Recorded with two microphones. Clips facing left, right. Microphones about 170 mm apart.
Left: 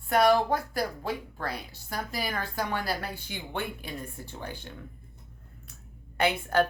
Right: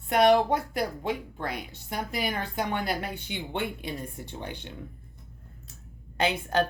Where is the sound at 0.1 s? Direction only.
20° right (ahead or behind).